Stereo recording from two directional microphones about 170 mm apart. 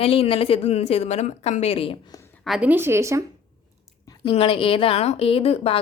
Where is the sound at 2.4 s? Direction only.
5° right (ahead or behind).